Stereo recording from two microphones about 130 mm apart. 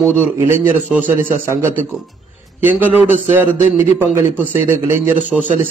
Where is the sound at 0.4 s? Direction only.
15° right (ahead or behind).